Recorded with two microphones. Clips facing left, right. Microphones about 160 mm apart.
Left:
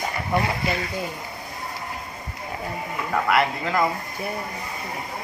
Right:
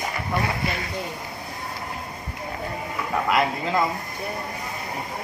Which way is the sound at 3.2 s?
20° right (ahead or behind).